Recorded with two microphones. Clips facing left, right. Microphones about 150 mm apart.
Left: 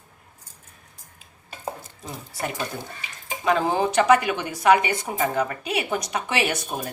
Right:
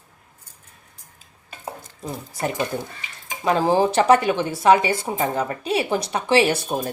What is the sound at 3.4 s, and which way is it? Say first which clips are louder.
A woman's voice: right 3 dB; 35° right (ahead or behind).